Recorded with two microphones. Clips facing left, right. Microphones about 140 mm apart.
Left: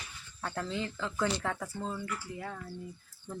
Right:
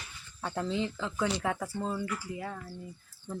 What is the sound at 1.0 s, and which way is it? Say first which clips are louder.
Speech: right 1 dB; 5° right (ahead or behind).